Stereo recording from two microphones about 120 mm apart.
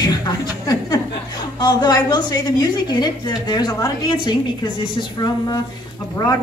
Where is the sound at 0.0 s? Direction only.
35° left (ahead or behind).